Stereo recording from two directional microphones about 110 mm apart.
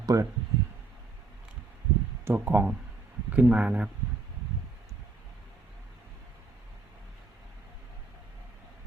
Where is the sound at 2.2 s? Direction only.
20° right (ahead or behind).